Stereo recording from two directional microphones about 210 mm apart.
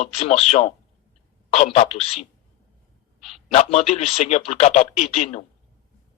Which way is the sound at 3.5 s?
30° left (ahead or behind).